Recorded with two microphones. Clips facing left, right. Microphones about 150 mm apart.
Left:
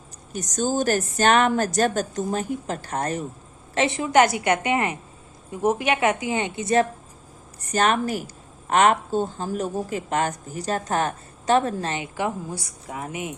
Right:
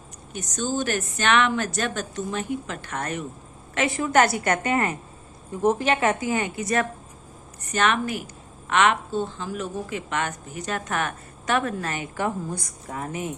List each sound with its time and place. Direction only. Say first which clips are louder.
0.3 s speech: left 3 dB; 40° left (ahead or behind)
3.8 s a woman's voice: left 2 dB; 25° left (ahead or behind)
7.7 s speech: left 2 dB; 40° left (ahead or behind)
12.1 s a woman's voice: even; 10° left (ahead or behind)